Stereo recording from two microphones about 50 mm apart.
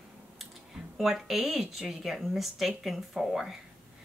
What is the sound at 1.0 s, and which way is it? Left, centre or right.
Speech, centre.